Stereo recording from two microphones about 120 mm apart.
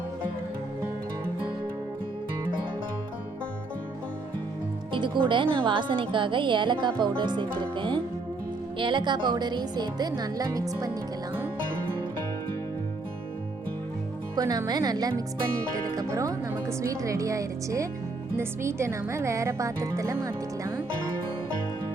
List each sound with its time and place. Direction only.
4.9 s a woman's voice: 45° right (ahead or behind)
14.3 s speech: 30° right (ahead or behind)